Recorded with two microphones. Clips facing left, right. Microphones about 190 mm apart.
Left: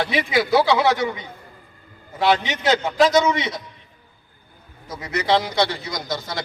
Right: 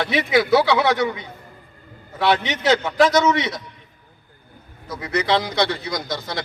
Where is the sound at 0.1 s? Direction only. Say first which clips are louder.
Right 6 dB; 30° left (ahead or behind).